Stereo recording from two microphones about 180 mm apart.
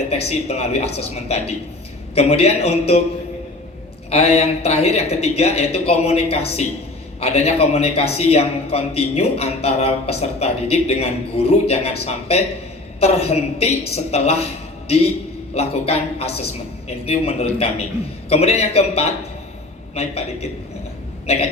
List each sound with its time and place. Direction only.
0.1 s a man's voice: 35° left (ahead or behind)
4.1 s a man's voice: 35° left (ahead or behind)
15.5 s a man's voice: 35° left (ahead or behind)